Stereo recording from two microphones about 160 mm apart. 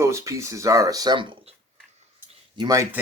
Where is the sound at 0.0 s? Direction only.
20° right (ahead or behind).